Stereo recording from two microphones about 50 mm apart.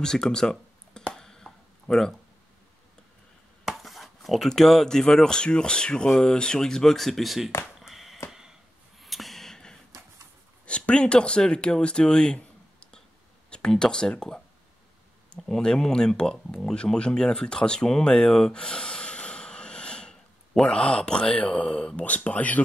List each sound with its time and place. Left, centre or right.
0.0 s speech: centre
1.1 s a sound: centre
3.6 s chopping: centre
4.5 s speech: centre
7.8 s a sound: centre
9.0 s a sound: centre
10.6 s speech: left
15.2 s speech: centre
22.0 s speech: left